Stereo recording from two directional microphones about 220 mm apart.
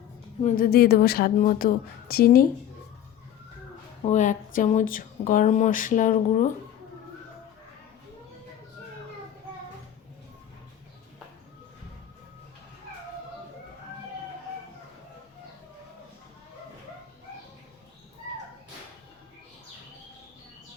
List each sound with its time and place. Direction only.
0.4 s a woman's voice: 40° left (ahead or behind)
4.0 s speech: 35° left (ahead or behind)